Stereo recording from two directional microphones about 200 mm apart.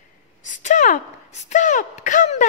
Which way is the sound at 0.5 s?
40° left (ahead or behind).